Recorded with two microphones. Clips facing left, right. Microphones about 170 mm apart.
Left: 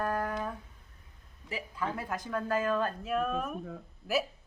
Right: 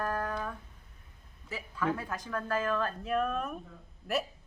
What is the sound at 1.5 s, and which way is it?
Speech, 15° left (ahead or behind).